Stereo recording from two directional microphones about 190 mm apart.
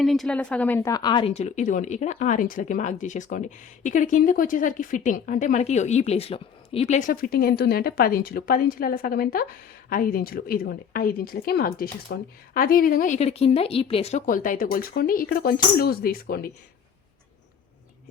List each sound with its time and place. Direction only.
0.0 s a woman's voice: centre (ahead or behind)
0.8 s a woman's voice: 20° left (ahead or behind)
1.3 s speech: 35° left (ahead or behind); by 16.5 s 50° left (ahead or behind)